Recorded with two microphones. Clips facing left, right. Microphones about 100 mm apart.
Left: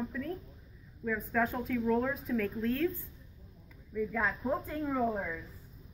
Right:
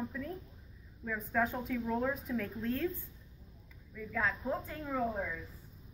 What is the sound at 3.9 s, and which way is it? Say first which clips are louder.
A woman's voice: left 3 dB; 10° left (ahead or behind).